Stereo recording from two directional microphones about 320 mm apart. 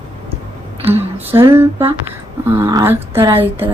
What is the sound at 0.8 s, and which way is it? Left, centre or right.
A woman's voice, centre.